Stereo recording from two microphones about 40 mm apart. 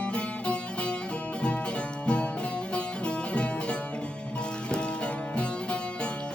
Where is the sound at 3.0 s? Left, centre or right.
Left.